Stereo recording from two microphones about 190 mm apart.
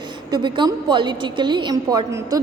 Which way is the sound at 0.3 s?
20° right (ahead or behind).